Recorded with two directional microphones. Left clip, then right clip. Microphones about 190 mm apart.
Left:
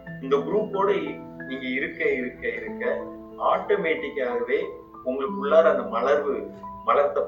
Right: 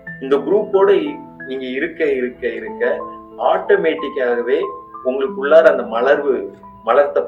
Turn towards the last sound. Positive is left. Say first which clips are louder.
# right 7 dB
turn(degrees=-40)  # may be behind; listen again after turning